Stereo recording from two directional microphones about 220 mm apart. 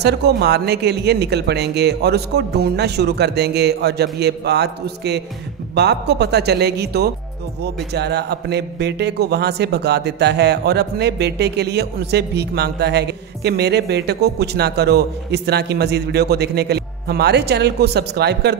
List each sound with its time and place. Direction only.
0.0 s a man's voice: 50° right (ahead or behind)